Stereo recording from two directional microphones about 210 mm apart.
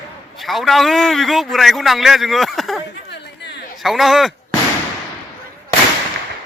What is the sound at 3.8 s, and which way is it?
Speech, centre (ahead or behind).